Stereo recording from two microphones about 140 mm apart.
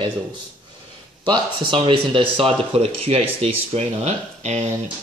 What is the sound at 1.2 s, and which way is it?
Speech, 35° right (ahead or behind).